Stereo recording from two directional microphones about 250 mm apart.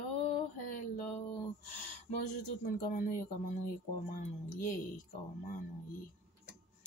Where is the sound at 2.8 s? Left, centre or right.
Left.